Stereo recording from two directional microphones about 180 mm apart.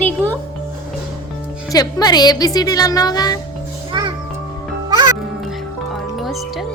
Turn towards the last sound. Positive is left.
turn(degrees=0)  # may be behind; listen again after turning